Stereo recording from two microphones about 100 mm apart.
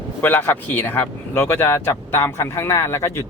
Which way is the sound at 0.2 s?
20° left (ahead or behind).